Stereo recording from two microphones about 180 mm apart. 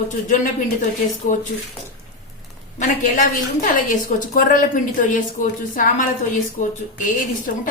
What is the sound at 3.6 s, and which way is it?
A woman's voice, 45° left (ahead or behind).